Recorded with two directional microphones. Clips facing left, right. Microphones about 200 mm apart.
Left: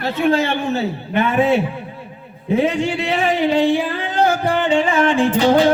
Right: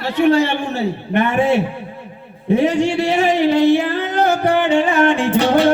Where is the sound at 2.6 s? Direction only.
75° right (ahead or behind).